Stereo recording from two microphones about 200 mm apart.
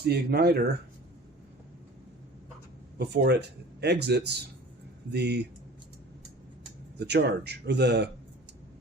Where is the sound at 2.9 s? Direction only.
55° right (ahead or behind).